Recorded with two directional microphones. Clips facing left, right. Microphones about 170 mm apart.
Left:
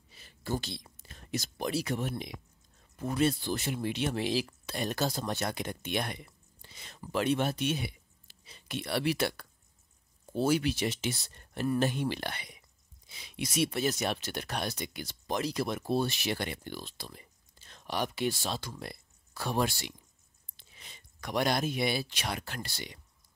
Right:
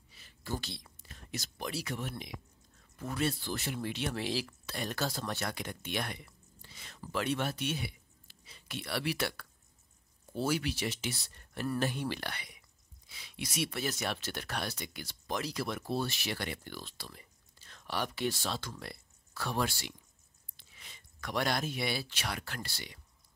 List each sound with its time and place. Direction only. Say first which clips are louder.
0.6 s speech: left 5 dB; 20° left (ahead or behind)